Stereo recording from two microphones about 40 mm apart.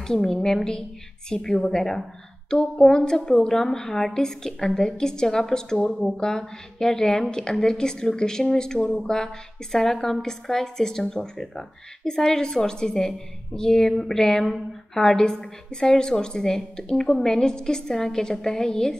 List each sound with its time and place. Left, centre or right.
0.0 s a woman's voice: centre